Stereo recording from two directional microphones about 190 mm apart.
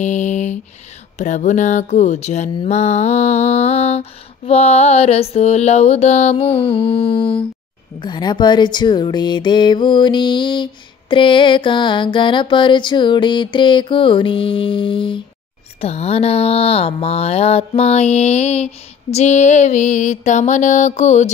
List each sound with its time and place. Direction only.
0.0 s a sound: 40° left (ahead or behind)
1.1 s music: 40° left (ahead or behind)
8.0 s speech: 25° left (ahead or behind)
15.8 s music: 35° left (ahead or behind)